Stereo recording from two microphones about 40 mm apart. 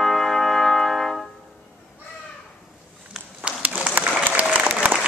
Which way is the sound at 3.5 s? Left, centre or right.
Right.